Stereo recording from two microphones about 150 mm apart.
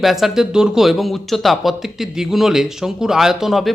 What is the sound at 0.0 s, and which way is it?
Speech, centre (ahead or behind).